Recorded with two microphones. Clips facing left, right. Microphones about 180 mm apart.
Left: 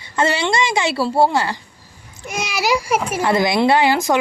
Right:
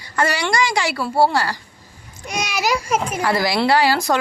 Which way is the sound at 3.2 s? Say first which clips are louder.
Left 4 dB; 20° left (ahead or behind).